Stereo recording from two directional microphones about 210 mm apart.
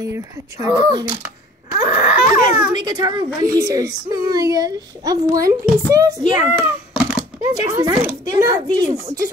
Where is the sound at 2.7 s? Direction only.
20° right (ahead or behind).